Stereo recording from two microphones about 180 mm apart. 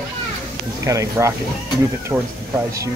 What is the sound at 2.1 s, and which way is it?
Speech, centre (ahead or behind).